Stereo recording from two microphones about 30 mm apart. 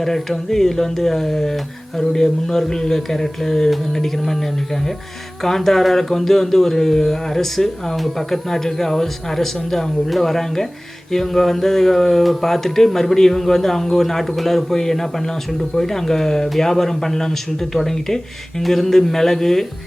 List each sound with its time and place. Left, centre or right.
0.0 s speech: centre